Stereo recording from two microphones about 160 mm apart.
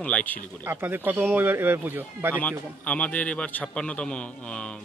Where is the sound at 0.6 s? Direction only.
15° right (ahead or behind).